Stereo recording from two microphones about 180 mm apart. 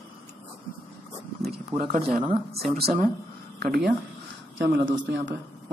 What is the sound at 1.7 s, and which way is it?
Speech, 20° right (ahead or behind).